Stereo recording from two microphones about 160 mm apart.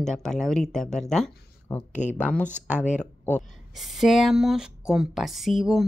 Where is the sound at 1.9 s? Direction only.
50° left (ahead or behind).